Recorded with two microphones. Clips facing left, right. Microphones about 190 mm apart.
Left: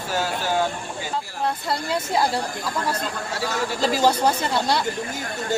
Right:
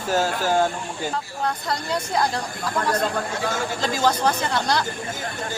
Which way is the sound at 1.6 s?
5° left (ahead or behind).